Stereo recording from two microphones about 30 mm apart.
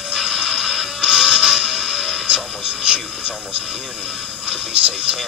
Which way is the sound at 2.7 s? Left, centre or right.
Right.